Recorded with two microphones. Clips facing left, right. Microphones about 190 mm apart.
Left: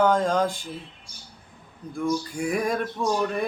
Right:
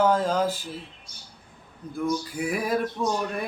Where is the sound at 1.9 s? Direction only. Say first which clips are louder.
Left 1 dB; 5° right (ahead or behind).